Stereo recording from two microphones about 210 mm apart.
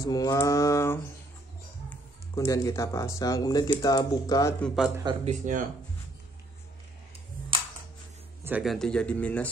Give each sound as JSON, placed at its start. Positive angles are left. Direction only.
{"t": 0.0, "sound": "speech", "side_deg": 15}
{"t": 5.2, "sound": "speech", "side_deg": -35}
{"t": 8.5, "sound": "speech", "side_deg": -5}